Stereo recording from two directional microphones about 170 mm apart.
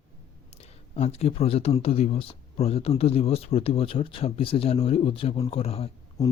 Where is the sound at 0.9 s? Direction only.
40° left (ahead or behind).